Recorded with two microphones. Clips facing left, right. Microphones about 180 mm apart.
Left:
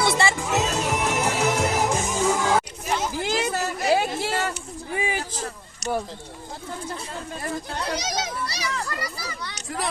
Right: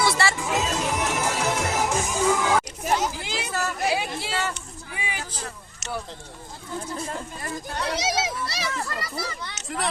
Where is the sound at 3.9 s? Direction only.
50° left (ahead or behind).